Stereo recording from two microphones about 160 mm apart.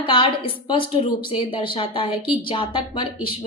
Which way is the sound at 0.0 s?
35° left (ahead or behind).